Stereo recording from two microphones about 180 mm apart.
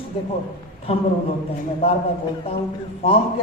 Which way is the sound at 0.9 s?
35° left (ahead or behind).